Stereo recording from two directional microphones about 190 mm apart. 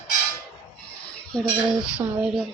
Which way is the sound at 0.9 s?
5° left (ahead or behind).